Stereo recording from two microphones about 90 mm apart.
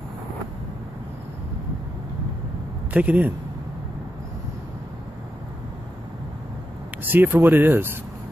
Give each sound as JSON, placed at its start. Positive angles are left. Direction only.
{"t": 2.9, "sound": "speech", "side_deg": -15}
{"t": 7.0, "sound": "speech", "side_deg": -20}